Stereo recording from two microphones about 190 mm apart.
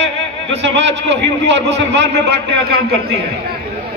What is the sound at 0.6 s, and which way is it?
A man's voice, 70° right (ahead or behind).